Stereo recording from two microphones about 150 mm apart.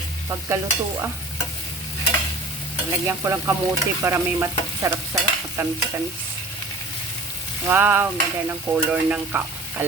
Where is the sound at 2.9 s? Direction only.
20° right (ahead or behind).